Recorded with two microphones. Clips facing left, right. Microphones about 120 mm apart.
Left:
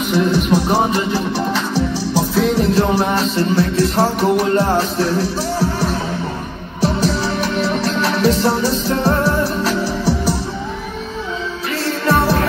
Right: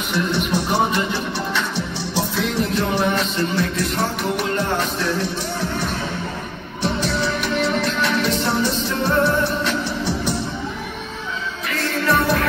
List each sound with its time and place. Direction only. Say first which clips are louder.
0.1 s speech: left 6 dB; 40° left (ahead or behind)
2.1 s music: left 5 dB; 40° left (ahead or behind)
6.8 s music: left 4 dB; 35° left (ahead or behind)
11.7 s music: left 3 dB; 30° left (ahead or behind)